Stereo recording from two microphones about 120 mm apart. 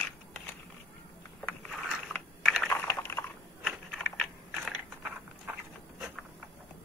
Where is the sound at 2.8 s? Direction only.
20° left (ahead or behind).